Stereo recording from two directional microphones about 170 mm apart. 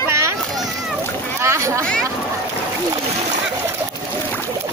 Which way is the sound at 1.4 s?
15° right (ahead or behind).